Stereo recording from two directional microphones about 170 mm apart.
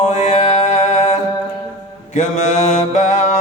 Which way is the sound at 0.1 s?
40° left (ahead or behind).